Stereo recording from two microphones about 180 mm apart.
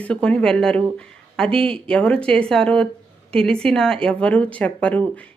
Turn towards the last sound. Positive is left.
turn(degrees=5)  # may be behind; listen again after turning